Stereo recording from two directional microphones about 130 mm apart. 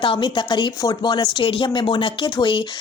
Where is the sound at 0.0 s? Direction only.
40° left (ahead or behind).